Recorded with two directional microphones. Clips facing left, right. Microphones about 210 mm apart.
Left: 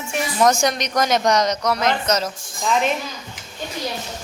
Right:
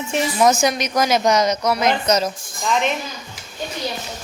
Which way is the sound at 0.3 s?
5° right (ahead or behind).